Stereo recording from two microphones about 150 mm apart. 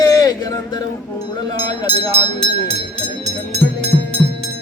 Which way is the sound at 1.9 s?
40° right (ahead or behind).